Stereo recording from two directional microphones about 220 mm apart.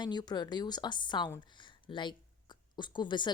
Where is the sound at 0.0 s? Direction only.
20° left (ahead or behind).